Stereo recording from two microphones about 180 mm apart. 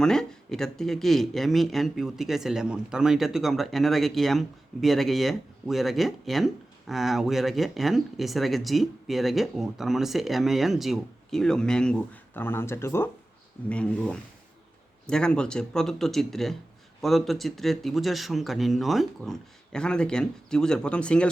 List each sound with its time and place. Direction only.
0.0 s speech: 5° left (ahead or behind)